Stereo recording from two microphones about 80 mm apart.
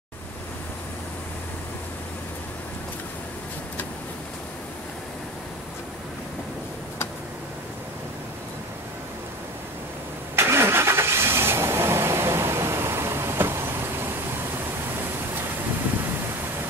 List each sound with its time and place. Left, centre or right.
10.3 s vehicle: right